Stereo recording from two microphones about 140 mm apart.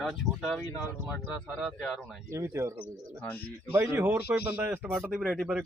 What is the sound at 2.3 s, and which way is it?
Speech, 20° right (ahead or behind).